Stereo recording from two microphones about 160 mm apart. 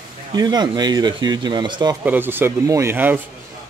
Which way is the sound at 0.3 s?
25° right (ahead or behind).